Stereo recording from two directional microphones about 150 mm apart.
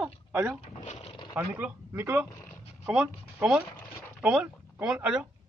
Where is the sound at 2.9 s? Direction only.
Centre (ahead or behind).